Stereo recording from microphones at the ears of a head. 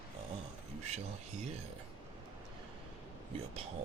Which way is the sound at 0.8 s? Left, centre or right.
Right.